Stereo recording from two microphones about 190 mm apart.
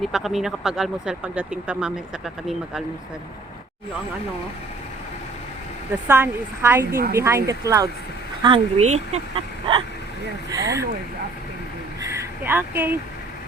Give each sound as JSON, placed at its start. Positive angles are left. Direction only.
{"t": 0.0, "sound": "speech", "side_deg": 0}
{"t": 6.1, "sound": "a woman's voice", "side_deg": -10}
{"t": 6.9, "sound": "speech", "side_deg": -50}
{"t": 7.2, "sound": "a woman's voice", "side_deg": -15}
{"t": 10.5, "sound": "a woman's voice", "side_deg": -15}
{"t": 12.0, "sound": "a sound", "side_deg": -10}